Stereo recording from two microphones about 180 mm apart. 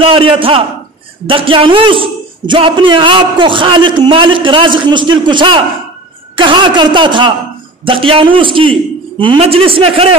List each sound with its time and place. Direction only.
0.0 s a woman's voice: 30° right (ahead or behind)